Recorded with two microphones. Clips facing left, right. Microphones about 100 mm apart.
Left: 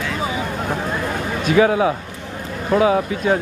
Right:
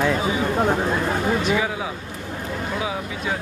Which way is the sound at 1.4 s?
60° left (ahead or behind).